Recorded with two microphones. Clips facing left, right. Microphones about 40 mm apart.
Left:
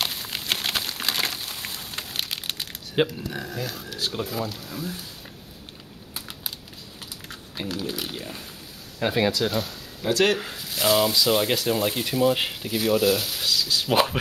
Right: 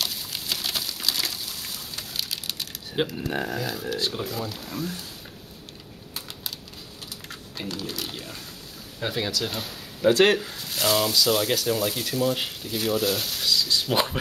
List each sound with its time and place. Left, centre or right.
0.0 s a sound: left
3.3 s speech: right
3.5 s speech: centre
4.6 s speech: centre
7.5 s speech: centre
10.0 s speech: right
10.5 s speech: centre; by 12.7 s left
12.7 s speech: centre